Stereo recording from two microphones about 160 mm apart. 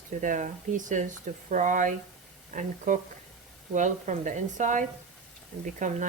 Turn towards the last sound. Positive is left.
turn(degrees=-55)  # may be behind; listen again after turning